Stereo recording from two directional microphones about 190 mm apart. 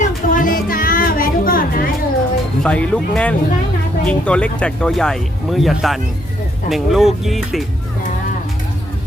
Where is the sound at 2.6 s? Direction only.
5° left (ahead or behind).